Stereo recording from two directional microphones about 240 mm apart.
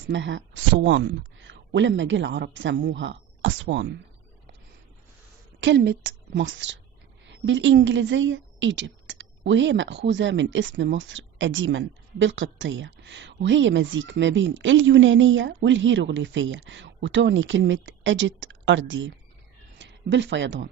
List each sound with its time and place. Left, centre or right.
0.0 s a woman's voice: right
5.5 s a woman's voice: right